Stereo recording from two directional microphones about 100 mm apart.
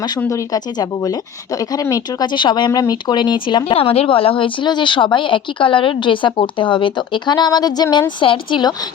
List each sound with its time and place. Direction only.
0.3 s speech: 35° left (ahead or behind)
8.2 s speech: 55° left (ahead or behind)